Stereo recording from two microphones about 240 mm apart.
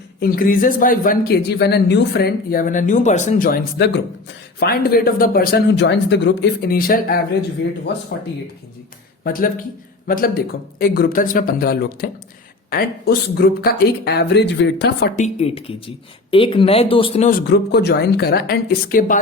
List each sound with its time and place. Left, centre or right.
0.2 s speech: left
9.2 s speech: left
15.2 s speech: left